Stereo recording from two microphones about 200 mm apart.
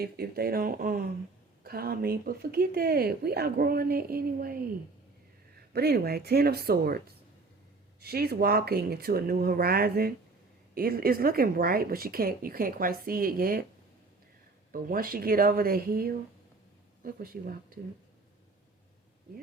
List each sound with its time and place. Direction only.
0.0 s speech: 50° right (ahead or behind)
8.0 s speech: 50° right (ahead or behind)
14.7 s speech: 45° right (ahead or behind)